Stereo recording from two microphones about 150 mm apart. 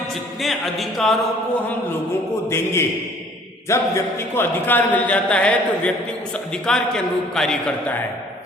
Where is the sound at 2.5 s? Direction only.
15° left (ahead or behind).